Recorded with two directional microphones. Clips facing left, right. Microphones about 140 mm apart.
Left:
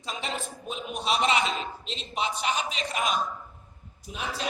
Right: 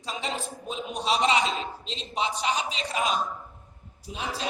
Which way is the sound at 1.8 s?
30° right (ahead or behind).